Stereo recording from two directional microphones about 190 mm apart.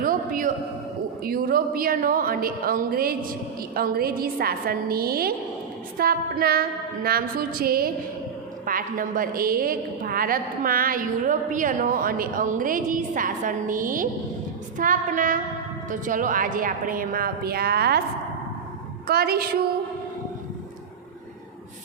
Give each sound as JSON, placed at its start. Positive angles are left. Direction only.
{"t": 0.0, "sound": "a man's voice", "side_deg": -45}
{"t": 19.0, "sound": "a woman's voice", "side_deg": -55}